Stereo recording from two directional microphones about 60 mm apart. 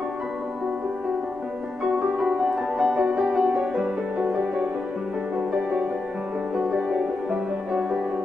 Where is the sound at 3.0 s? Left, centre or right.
Centre.